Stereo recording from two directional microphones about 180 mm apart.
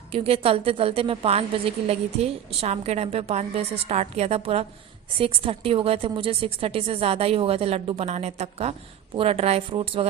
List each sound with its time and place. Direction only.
0.1 s a woman's voice: 30° right (ahead or behind)